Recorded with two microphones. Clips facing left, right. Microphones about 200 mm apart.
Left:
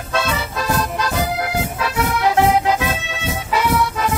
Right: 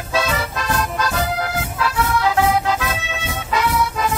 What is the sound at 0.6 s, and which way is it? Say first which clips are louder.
Music: left 2 dB; 10° left (ahead or behind).